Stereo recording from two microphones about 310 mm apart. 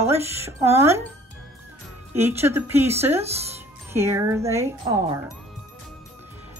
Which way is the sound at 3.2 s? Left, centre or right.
Centre.